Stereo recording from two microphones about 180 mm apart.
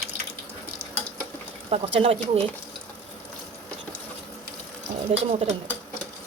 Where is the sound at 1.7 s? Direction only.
35° right (ahead or behind).